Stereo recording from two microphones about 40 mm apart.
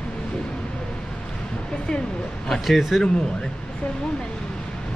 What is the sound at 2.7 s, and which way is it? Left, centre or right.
Speech, centre.